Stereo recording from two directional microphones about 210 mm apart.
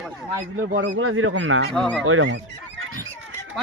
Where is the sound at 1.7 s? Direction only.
5° left (ahead or behind).